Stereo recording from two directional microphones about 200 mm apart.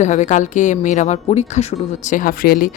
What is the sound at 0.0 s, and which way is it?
A woman's voice, 35° left (ahead or behind).